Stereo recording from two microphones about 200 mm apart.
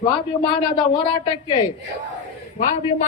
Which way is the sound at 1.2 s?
25° left (ahead or behind).